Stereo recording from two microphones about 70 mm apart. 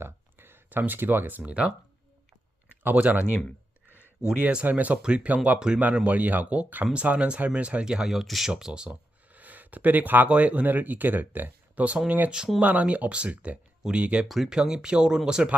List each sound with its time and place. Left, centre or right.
0.0 s a sound: right
2.8 s speech: right
4.4 s speech: right
8.9 s speech: right
14.3 s speech: centre